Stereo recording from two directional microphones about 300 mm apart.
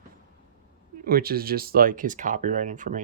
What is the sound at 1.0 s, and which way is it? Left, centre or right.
Speech, right.